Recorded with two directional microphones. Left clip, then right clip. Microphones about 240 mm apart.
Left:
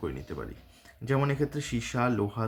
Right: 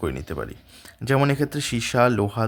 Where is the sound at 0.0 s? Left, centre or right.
Right.